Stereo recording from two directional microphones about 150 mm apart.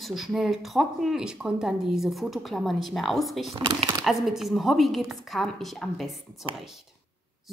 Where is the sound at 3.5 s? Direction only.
35° right (ahead or behind).